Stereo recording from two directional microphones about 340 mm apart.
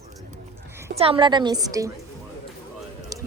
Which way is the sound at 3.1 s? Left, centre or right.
Centre.